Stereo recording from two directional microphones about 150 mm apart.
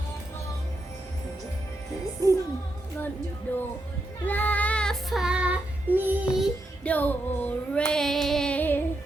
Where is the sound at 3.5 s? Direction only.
10° left (ahead or behind).